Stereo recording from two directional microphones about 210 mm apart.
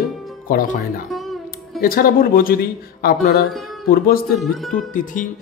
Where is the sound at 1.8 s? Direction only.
45° left (ahead or behind).